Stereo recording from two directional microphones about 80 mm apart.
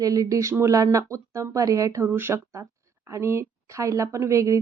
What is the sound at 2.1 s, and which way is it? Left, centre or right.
A woman's voice, right.